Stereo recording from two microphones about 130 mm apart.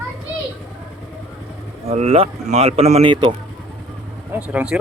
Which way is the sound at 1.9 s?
55° right (ahead or behind).